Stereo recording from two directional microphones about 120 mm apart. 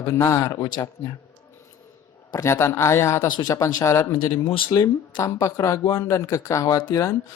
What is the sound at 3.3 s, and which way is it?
Speech, 35° left (ahead or behind).